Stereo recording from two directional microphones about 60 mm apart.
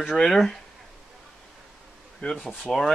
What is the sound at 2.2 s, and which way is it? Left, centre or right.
Speech, centre.